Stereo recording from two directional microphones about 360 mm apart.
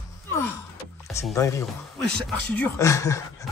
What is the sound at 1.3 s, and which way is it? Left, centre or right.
Speech, centre.